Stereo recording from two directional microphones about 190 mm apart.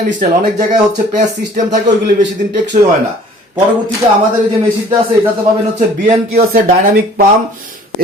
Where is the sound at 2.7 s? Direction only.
35° right (ahead or behind).